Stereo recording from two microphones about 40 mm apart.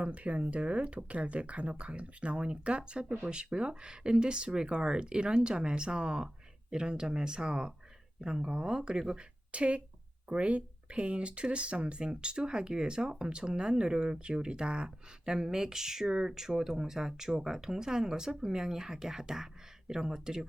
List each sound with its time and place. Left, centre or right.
0.0 s speech: right
9.1 s speech: right; by 20.4 s centre